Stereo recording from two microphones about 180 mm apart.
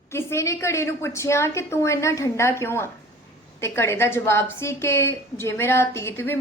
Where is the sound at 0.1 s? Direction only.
15° left (ahead or behind).